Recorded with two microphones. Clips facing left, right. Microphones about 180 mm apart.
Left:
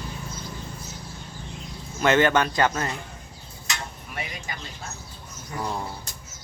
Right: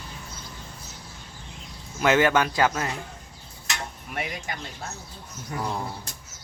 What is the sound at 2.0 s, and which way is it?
Speech, 5° right (ahead or behind).